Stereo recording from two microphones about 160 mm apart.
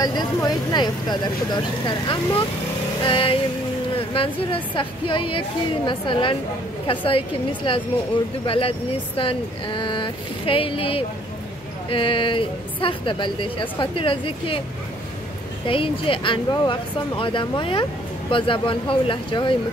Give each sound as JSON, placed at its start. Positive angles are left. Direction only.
{"t": 0.0, "sound": "speech", "side_deg": 25}
{"t": 15.6, "sound": "speech", "side_deg": 35}